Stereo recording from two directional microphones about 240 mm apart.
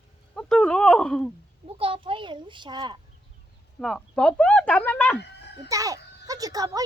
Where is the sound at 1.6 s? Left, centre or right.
Right.